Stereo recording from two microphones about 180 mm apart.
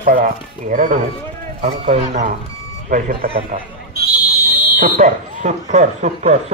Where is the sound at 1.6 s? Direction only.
35° right (ahead or behind).